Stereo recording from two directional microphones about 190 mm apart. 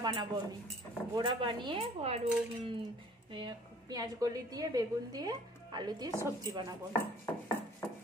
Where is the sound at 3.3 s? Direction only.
20° right (ahead or behind).